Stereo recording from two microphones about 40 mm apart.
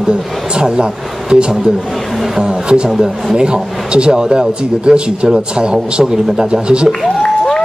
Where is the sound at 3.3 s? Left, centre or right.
Right.